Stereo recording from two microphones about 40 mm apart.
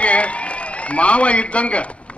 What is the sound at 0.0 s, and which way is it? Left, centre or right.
A man's voice, left.